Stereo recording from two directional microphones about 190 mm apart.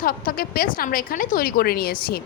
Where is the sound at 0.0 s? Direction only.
50° left (ahead or behind).